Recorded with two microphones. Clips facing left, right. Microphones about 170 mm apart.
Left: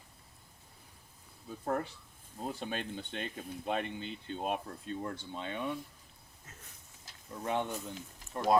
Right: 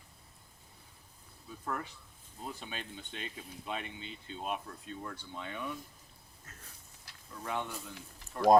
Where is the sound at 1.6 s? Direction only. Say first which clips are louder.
Left 5 dB; 35° left (ahead or behind).